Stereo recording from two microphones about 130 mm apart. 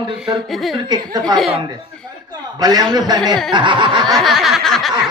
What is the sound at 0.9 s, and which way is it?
Speech, 30° right (ahead or behind).